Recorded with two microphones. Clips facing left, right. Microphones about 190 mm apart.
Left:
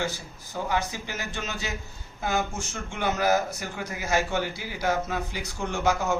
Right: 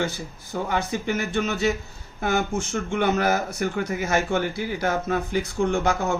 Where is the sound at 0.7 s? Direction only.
60° right (ahead or behind).